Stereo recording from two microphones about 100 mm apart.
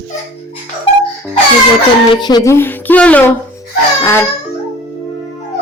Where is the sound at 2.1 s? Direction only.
45° left (ahead or behind).